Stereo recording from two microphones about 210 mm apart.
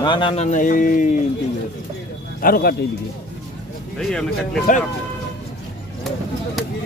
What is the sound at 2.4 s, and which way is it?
Speech, 45° left (ahead or behind).